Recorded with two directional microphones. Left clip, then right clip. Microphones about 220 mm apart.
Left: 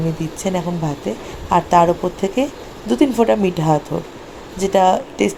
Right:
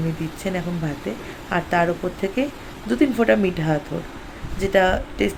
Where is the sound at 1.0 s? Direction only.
20° left (ahead or behind).